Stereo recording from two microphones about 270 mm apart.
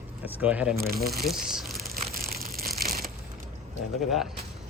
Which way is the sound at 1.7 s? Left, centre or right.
Right.